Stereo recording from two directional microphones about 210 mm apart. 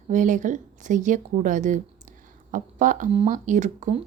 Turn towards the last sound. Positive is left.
turn(degrees=-35)  # may be behind; listen again after turning